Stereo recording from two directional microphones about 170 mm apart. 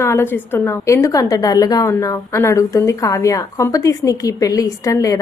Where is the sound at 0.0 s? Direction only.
15° left (ahead or behind).